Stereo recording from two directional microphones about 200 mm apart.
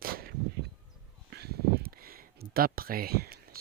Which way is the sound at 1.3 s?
55° right (ahead or behind).